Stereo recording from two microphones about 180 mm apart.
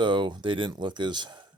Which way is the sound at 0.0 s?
25° right (ahead or behind).